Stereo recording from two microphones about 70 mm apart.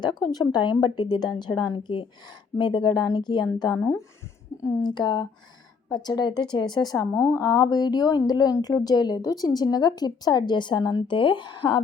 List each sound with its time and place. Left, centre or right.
0.0 s a woman's voice: left
4.8 s a woman's voice: left
7.1 s a woman's voice: left
7.3 s a woman's voice: left